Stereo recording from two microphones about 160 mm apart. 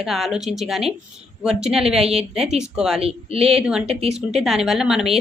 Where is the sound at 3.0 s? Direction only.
40° right (ahead or behind).